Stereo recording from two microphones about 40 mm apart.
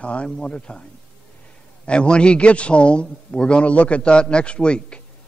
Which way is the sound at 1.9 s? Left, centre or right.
Left.